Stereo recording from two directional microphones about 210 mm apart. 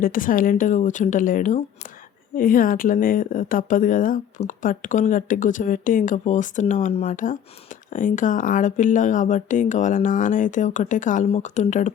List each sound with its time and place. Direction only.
0.0 s speech: 40° left (ahead or behind)